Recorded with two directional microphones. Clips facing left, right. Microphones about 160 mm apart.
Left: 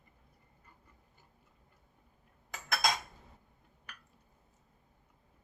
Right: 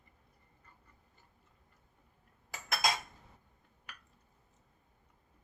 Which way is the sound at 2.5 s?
5° right (ahead or behind).